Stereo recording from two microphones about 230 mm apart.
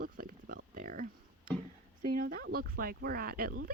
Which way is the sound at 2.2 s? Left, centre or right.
Right.